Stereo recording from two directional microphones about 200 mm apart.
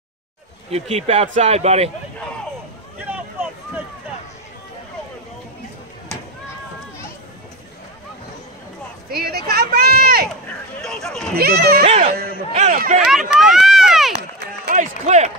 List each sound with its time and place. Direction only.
0.7 s speech: 30° right (ahead or behind)
9.1 s a sound: 50° right (ahead or behind)
10.8 s a sound: 5° left (ahead or behind)
11.3 s speech: 50° right (ahead or behind)
11.8 s speech: 35° right (ahead or behind)
13.5 s run: centre (ahead or behind)
14.7 s speech: 35° right (ahead or behind)